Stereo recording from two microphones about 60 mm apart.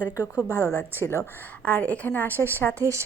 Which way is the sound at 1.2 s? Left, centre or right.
Left.